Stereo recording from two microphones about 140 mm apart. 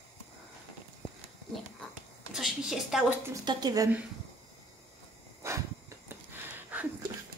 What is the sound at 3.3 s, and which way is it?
Speech, 30° right (ahead or behind).